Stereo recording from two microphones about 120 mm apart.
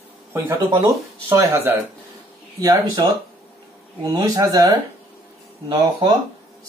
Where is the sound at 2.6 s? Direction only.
30° right (ahead or behind).